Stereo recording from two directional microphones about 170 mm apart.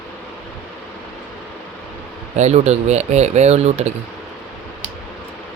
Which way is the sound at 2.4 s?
40° right (ahead or behind).